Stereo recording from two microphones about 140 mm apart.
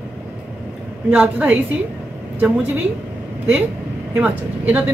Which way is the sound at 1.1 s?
10° right (ahead or behind).